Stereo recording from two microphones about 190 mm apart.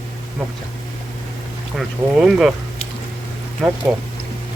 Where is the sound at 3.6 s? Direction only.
5° right (ahead or behind).